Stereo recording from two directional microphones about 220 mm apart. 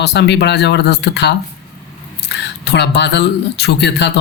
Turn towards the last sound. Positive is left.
turn(degrees=50)  # may be behind; listen again after turning